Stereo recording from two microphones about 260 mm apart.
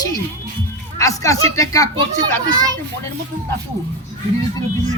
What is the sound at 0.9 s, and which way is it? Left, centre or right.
Speech, centre.